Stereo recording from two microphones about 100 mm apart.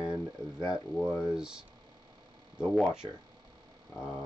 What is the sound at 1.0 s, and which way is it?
Speech, 10° right (ahead or behind).